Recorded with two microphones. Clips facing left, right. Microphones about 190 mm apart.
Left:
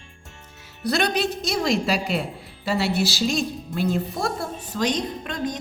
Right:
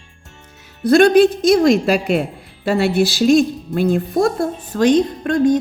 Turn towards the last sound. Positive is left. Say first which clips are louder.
# right 13 dB
turn(degrees=-50)  # may be behind; listen again after turning